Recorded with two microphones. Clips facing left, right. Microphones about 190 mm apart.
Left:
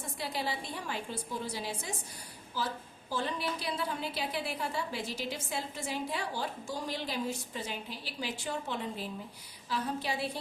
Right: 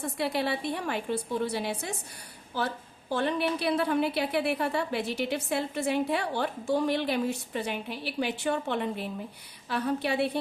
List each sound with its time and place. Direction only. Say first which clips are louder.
0.0 s a woman's voice: right 7 dB; 65° right (ahead or behind)